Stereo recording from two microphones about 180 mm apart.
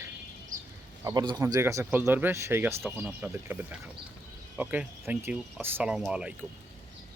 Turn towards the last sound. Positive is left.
turn(degrees=-5)  # may be behind; listen again after turning